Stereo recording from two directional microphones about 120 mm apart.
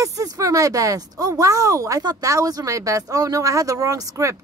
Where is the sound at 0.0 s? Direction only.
30° right (ahead or behind).